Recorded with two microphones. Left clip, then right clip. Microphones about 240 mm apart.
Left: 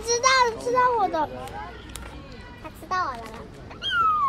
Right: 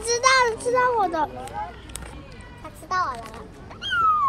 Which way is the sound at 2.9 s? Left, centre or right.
Right.